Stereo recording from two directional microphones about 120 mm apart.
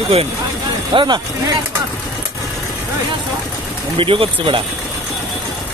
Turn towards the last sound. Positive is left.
turn(degrees=-45)  # may be behind; listen again after turning